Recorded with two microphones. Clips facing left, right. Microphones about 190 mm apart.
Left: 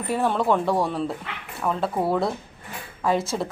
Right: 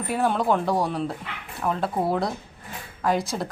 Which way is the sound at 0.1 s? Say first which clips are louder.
Left 1 dB; centre (ahead or behind).